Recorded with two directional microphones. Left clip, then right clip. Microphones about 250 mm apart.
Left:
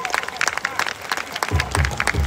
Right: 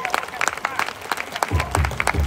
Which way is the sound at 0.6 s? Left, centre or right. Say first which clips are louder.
Left 1 dB; centre.